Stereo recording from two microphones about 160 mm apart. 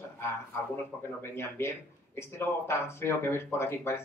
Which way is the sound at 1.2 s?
15° left (ahead or behind).